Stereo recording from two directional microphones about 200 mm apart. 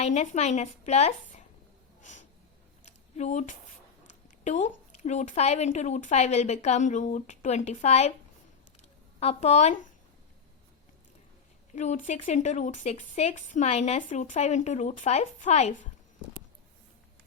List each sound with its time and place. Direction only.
0.0 s speech: 35° left (ahead or behind)
2.0 s snort: 35° left (ahead or behind)
2.8 s a sound: 35° left (ahead or behind)
4.4 s speech: 35° left (ahead or behind)
9.2 s speech: 35° left (ahead or behind)
11.7 s speech: 35° left (ahead or behind)